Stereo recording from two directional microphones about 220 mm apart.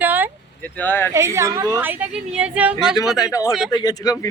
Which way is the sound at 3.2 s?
15° left (ahead or behind).